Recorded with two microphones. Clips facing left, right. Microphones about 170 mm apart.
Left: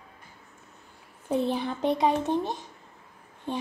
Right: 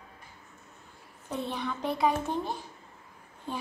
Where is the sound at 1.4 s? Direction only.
30° left (ahead or behind).